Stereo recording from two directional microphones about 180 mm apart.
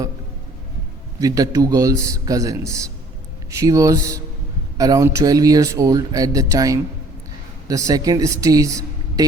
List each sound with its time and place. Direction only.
1.2 s speech: 20° right (ahead or behind)